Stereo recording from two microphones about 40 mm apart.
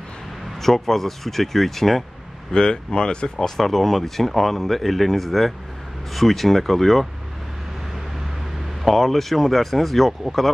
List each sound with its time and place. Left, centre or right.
0.6 s speech: centre
2.5 s speech: centre
3.3 s speech: centre
8.8 s speech: centre